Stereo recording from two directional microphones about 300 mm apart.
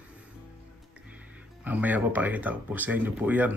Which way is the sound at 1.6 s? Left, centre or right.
Centre.